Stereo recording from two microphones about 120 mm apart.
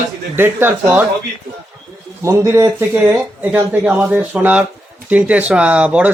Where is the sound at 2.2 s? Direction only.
20° right (ahead or behind).